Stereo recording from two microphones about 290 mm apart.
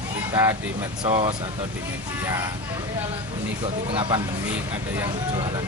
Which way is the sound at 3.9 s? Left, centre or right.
Centre.